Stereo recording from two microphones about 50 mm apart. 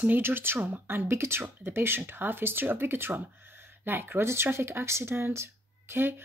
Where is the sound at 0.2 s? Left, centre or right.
Right.